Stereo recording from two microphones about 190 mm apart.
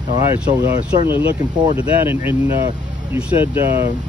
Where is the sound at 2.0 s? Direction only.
10° right (ahead or behind).